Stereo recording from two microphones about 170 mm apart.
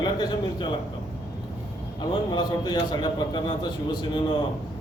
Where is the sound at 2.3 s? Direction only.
25° left (ahead or behind).